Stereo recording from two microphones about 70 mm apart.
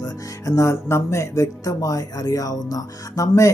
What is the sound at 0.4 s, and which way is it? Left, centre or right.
Speech, left.